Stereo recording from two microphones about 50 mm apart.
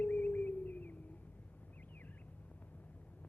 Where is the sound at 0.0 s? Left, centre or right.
Left.